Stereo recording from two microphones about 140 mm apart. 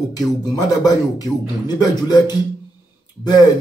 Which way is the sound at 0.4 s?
25° left (ahead or behind).